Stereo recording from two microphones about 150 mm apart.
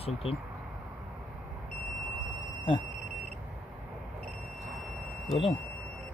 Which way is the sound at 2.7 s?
35° left (ahead or behind).